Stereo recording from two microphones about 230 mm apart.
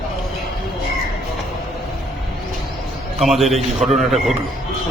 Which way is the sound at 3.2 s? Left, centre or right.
Centre.